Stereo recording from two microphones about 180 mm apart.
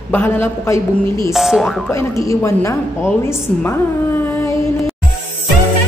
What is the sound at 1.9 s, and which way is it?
A woman's voice, 15° left (ahead or behind).